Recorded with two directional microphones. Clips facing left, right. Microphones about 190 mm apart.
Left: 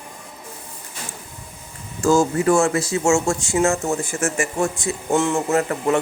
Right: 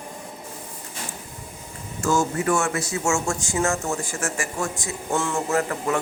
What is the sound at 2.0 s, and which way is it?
Speech, 30° left (ahead or behind).